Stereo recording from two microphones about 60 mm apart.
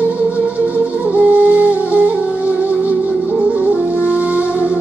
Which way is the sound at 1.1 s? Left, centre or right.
Right.